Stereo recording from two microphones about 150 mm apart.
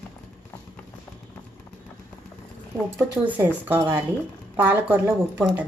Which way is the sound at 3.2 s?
10° right (ahead or behind).